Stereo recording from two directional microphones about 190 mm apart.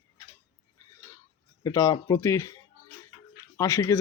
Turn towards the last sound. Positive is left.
turn(degrees=15)  # may be behind; listen again after turning